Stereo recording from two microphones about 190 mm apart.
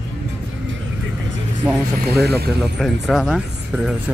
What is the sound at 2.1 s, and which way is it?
Speech, 55° right (ahead or behind).